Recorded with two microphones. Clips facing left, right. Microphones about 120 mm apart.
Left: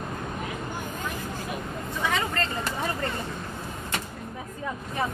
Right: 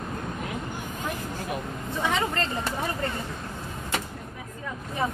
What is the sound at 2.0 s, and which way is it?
Vehicle, 20° right (ahead or behind).